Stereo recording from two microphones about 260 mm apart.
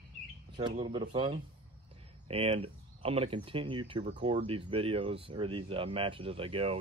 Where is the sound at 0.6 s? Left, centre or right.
Centre.